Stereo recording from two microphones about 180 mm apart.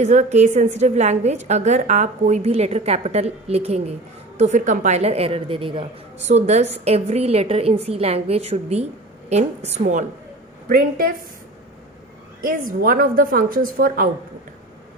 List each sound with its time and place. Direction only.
0.0 s a woman's voice: 40° right (ahead or behind)
10.7 s a woman's voice: 55° right (ahead or behind)
12.4 s a woman's voice: 55° right (ahead or behind)